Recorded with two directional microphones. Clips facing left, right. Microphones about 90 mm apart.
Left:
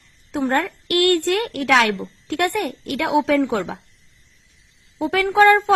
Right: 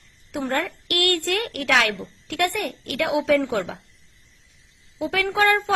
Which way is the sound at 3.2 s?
40° left (ahead or behind).